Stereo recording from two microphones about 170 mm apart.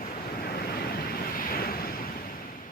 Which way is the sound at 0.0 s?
60° left (ahead or behind).